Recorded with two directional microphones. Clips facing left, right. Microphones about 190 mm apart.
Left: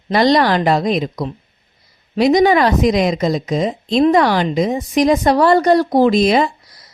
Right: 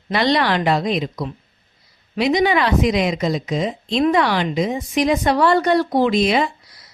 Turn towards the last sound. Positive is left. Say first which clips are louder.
# left 4 dB
turn(degrees=40)  # may be behind; listen again after turning